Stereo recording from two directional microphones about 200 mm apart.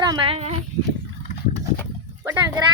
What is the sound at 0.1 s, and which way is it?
Speech, 25° right (ahead or behind).